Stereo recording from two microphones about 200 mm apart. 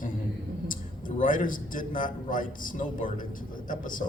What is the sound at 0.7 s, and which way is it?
A man's voice, 45° left (ahead or behind).